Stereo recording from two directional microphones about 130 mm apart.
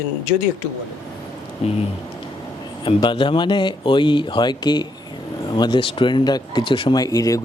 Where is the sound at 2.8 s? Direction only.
40° left (ahead or behind).